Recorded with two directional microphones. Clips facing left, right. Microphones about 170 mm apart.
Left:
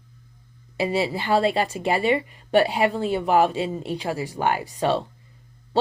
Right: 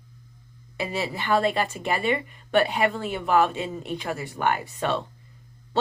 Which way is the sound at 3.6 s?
30° left (ahead or behind).